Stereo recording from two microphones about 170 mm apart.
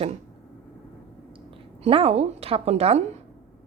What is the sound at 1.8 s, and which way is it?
Speech, 35° right (ahead or behind).